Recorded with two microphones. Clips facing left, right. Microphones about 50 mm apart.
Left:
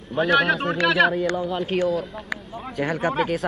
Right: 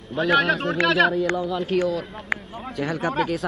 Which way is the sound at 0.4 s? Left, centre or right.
Centre.